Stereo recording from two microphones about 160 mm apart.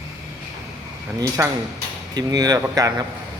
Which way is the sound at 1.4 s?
15° right (ahead or behind).